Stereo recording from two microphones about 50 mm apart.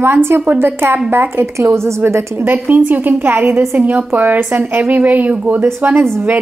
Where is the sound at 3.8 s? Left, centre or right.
Right.